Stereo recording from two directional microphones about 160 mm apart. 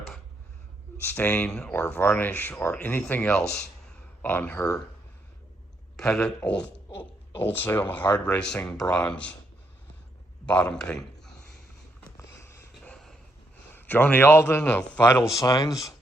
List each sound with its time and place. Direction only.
1.0 s speech: 10° left (ahead or behind)
6.0 s speech: 5° left (ahead or behind)
10.4 s a man's voice: 5° left (ahead or behind)
12.0 s a sound: 20° left (ahead or behind)
13.7 s speech: 10° left (ahead or behind)
15.3 s speech: 20° left (ahead or behind)